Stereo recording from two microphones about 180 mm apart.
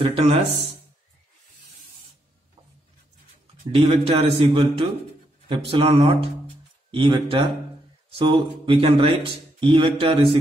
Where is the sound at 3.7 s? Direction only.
35° right (ahead or behind).